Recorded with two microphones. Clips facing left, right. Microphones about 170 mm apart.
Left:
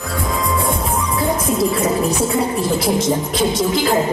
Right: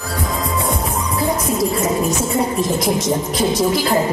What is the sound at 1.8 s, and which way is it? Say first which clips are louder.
A woman's voice: left 1 dB; 30° left (ahead or behind).